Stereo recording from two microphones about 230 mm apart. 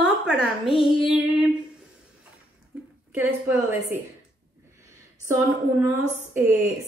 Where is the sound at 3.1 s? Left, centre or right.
Centre.